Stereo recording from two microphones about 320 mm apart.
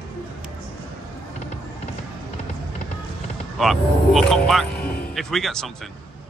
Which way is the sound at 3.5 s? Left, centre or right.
Centre.